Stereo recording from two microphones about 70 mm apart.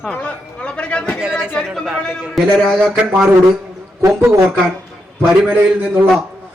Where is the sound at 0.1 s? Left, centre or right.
Centre.